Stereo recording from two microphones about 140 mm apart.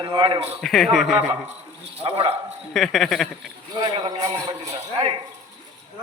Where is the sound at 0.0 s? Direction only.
35° right (ahead or behind).